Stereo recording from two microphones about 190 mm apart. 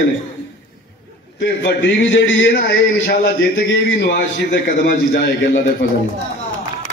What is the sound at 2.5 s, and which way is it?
A man's voice, 50° left (ahead or behind).